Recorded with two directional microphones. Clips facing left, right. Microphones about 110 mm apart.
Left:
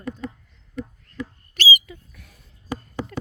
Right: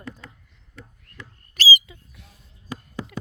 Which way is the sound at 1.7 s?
20° right (ahead or behind).